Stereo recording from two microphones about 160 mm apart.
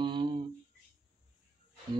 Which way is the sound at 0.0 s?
30° right (ahead or behind).